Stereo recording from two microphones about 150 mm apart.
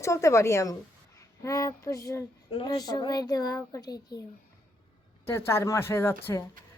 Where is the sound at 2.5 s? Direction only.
30° left (ahead or behind).